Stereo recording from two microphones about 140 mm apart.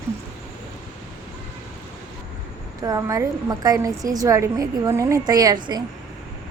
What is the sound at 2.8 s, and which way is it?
Speech, 25° right (ahead or behind).